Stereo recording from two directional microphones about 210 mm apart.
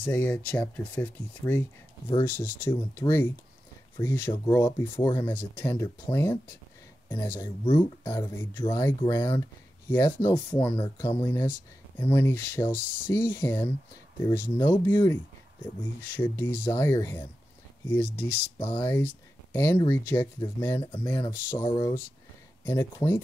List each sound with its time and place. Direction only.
0.0 s speech: 10° left (ahead or behind)
11.2 s speech: 10° left (ahead or behind)
18.6 s speech: 10° left (ahead or behind)
20.8 s speech: 25° left (ahead or behind)
21.1 s speech: 15° left (ahead or behind)